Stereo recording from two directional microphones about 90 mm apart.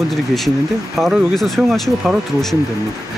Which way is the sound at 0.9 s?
Centre (ahead or behind).